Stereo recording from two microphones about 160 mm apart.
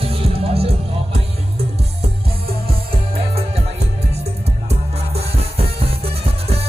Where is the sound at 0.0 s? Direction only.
35° right (ahead or behind).